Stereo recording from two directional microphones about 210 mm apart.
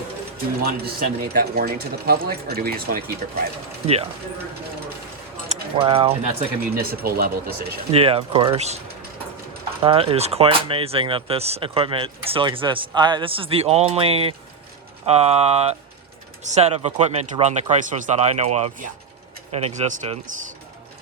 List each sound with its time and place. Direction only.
0.9 s speech: 45° right (ahead or behind)
5.5 s speech: 25° right (ahead or behind)
6.7 s speech: 45° right (ahead or behind)
7.9 s speech: 25° right (ahead or behind)
9.8 s speech: 25° right (ahead or behind)